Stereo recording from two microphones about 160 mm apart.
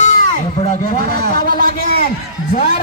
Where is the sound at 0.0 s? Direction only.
55° left (ahead or behind).